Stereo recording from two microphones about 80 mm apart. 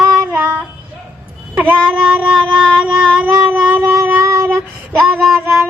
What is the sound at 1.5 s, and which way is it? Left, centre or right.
Child singing, centre.